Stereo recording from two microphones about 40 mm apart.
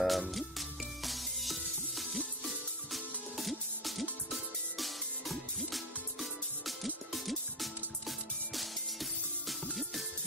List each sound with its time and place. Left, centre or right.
0.0 s music: centre